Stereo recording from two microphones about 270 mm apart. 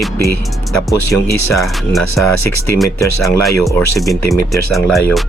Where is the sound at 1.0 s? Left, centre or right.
Left.